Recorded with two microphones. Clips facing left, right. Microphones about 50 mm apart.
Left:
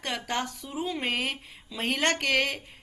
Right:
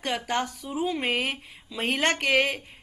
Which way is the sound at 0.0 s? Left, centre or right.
Centre.